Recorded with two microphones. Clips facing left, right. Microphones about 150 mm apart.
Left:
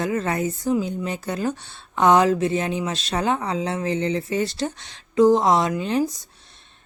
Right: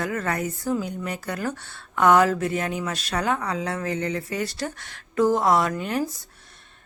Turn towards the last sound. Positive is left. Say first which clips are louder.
# left 4 dB
turn(degrees=20)  # may be behind; listen again after turning